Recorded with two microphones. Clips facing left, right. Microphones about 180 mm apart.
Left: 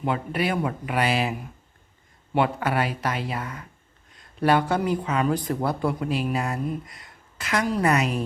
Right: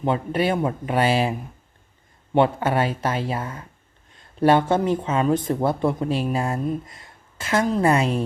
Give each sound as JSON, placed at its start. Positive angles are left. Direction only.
{"t": 0.0, "sound": "a woman's voice", "side_deg": -25}